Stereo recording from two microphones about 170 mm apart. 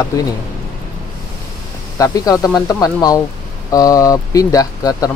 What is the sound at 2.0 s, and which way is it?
Speech, 20° left (ahead or behind).